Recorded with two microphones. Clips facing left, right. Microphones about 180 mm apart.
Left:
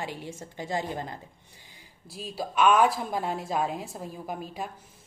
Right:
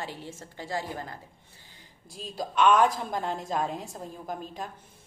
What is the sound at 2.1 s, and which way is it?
A woman's voice, 5° left (ahead or behind).